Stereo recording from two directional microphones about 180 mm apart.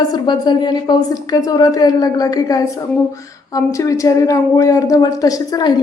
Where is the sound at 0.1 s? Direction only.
25° left (ahead or behind).